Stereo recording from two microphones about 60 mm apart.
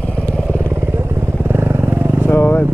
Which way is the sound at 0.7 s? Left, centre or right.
Right.